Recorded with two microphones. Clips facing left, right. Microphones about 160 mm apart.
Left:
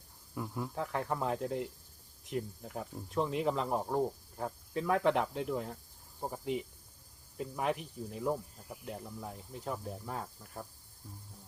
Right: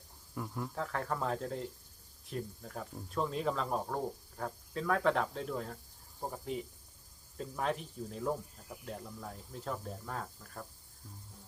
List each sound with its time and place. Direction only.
0.3 s speech: 5° left (ahead or behind)
0.8 s speech: 20° left (ahead or behind)